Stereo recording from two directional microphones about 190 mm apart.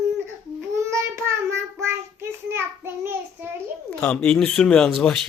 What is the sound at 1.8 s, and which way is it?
A child's voice, 15° right (ahead or behind).